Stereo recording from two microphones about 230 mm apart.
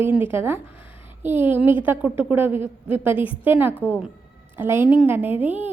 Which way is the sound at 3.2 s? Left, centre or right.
Left.